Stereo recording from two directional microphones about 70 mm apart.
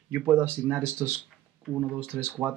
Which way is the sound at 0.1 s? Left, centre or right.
Right.